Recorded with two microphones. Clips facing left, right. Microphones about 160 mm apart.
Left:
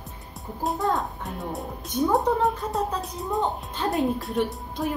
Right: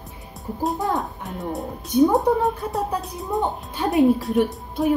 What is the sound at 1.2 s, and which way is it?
A woman's voice, centre (ahead or behind).